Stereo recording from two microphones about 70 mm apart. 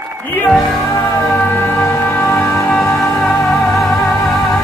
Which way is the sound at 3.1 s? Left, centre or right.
Centre.